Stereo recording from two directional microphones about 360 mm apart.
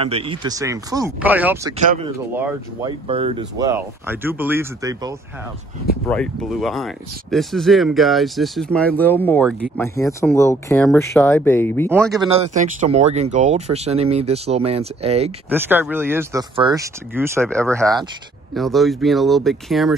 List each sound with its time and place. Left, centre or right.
0.0 s speech: centre
1.9 s speech: centre
12.2 s speech: centre
15.5 s speech: centre